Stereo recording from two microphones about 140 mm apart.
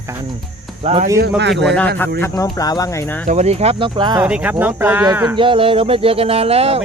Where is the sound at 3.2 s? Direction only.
50° right (ahead or behind); by 4.2 s 35° right (ahead or behind).